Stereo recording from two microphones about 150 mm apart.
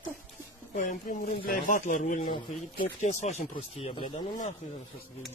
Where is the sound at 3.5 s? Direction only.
40° left (ahead or behind).